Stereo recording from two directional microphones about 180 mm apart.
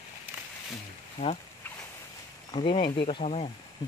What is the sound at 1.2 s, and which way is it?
Speech, 30° left (ahead or behind).